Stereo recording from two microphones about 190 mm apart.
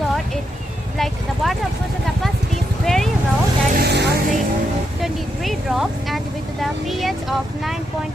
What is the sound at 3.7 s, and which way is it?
Vehicle, 60° right (ahead or behind).